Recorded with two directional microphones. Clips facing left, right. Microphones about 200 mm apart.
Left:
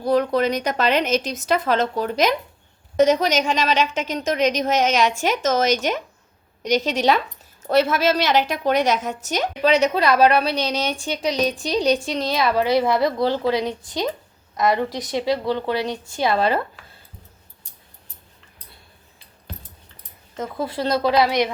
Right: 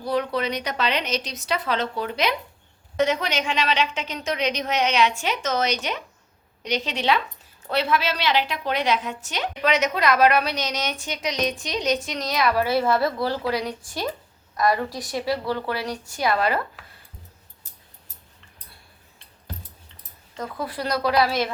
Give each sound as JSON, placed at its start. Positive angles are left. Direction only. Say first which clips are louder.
{"t": 0.0, "sound": "a woman's voice", "louder": "left 6 dB", "side_deg": 45}
{"t": 9.6, "sound": "a woman's voice", "louder": "left 4 dB", "side_deg": 30}
{"t": 16.8, "sound": "a sound", "louder": "even", "side_deg": 0}
{"t": 20.3, "sound": "a woman's voice", "louder": "left 4 dB", "side_deg": 25}